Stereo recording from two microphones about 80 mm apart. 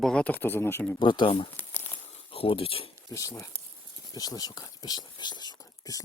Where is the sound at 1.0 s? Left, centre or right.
Left.